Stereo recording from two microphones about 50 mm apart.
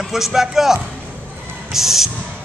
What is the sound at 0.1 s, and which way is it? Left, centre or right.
A man's voice, centre.